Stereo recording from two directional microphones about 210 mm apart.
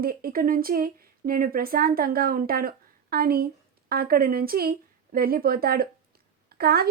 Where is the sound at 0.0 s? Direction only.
45° right (ahead or behind).